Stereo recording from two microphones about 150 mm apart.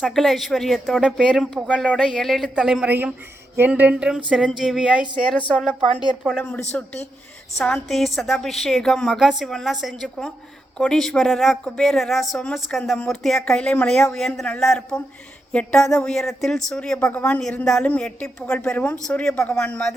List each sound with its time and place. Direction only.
0.0 s a woman's voice: centre (ahead or behind)
3.5 s a sound: 15° right (ahead or behind)
4.3 s a woman's voice: 5° right (ahead or behind)
6.3 s a woman's voice: 10° left (ahead or behind)